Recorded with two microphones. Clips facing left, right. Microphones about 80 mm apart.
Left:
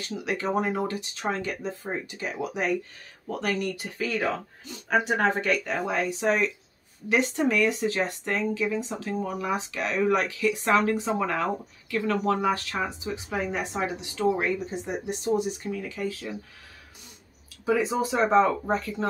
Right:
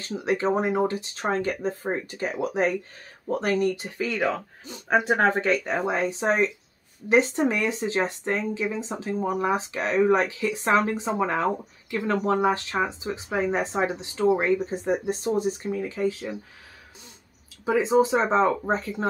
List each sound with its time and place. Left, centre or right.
0.0 s speech: right
1.3 s speech: right
17.6 s speech: right